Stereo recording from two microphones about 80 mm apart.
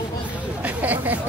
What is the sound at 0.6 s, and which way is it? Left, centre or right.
Chatter, right.